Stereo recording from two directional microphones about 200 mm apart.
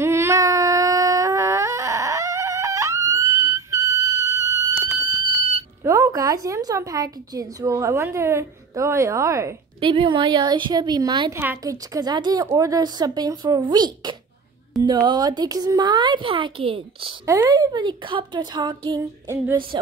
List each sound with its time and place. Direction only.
0.0 s a sound: 15° right (ahead or behind)
5.9 s a woman's voice: 15° right (ahead or behind)
17.3 s a woman's voice: 15° right (ahead or behind)